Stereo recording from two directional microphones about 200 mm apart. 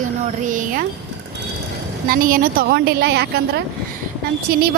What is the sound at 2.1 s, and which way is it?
A woman's voice, 45° right (ahead or behind).